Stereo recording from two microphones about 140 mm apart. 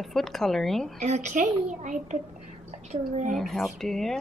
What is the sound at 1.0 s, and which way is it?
A woman's voice, 55° right (ahead or behind).